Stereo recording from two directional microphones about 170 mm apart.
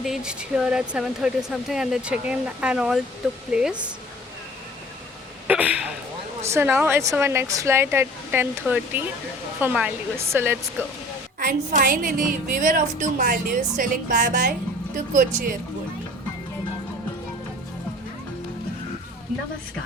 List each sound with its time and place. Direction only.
0.0 s speech: 5° right (ahead or behind)
5.5 s hiccup: 10° right (ahead or behind)
6.4 s speech: 15° right (ahead or behind)
11.3 s a woman's voice: 55° right (ahead or behind)